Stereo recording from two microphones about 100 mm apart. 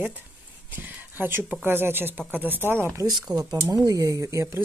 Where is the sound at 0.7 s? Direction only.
20° right (ahead or behind).